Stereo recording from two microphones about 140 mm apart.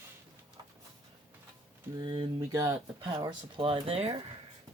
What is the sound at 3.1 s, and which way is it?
Speech, 35° right (ahead or behind).